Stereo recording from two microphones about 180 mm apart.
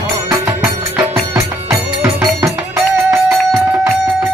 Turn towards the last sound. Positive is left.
turn(degrees=-15)  # may be behind; listen again after turning